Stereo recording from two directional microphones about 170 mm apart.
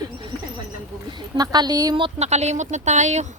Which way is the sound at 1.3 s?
25° right (ahead or behind).